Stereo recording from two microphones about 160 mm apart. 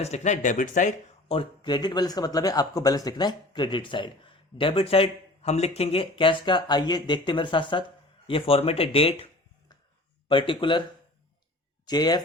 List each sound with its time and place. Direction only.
0.0 s speech: 45° left (ahead or behind)
1.3 s speech: 30° left (ahead or behind)
10.2 s speech: 30° left (ahead or behind)
11.9 s speech: 25° left (ahead or behind)